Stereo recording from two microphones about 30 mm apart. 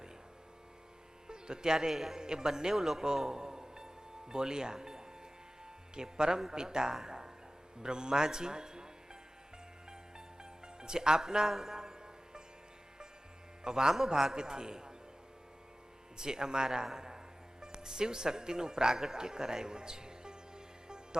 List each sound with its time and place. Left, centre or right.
1.3 s speech: right
1.9 s speech: centre
2.2 s a man's voice: right
3.2 s music: right
4.3 s a man's voice: right
10.8 s music: right
11.2 s speech: centre
11.8 s music: right
13.7 s a man's voice: right
16.1 s a man's voice: right
20.8 s music: right